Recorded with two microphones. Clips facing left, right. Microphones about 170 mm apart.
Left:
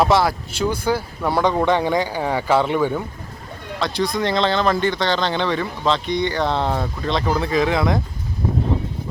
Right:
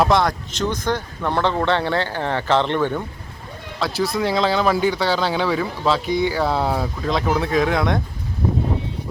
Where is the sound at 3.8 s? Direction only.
5° right (ahead or behind).